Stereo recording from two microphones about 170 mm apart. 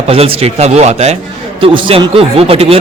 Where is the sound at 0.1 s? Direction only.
35° right (ahead or behind).